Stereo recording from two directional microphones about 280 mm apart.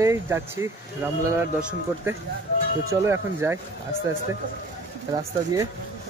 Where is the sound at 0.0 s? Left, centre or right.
Centre.